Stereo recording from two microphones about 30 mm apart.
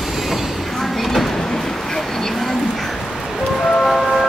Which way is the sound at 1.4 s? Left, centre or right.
Centre.